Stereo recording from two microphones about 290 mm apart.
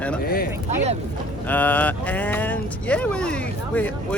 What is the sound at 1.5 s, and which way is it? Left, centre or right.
Speech, centre.